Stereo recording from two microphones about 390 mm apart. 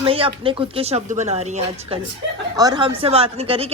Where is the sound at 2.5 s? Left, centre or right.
Centre.